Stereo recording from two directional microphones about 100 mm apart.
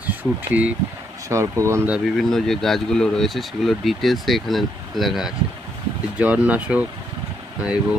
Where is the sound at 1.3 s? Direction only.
30° right (ahead or behind).